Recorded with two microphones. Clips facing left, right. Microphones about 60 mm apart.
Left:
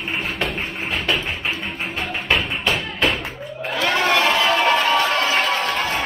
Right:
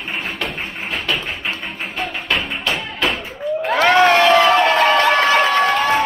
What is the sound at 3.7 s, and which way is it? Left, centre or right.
Crowd, right.